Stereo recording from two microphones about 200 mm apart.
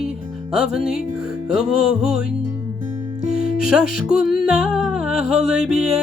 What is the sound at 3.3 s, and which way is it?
Music, 45° left (ahead or behind).